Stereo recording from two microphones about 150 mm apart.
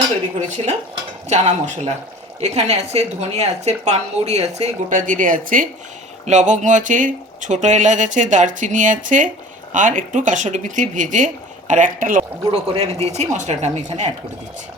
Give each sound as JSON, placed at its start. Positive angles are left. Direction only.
{"t": 0.3, "sound": "a woman's voice", "side_deg": -50}
{"t": 12.5, "sound": "a woman's voice", "side_deg": -40}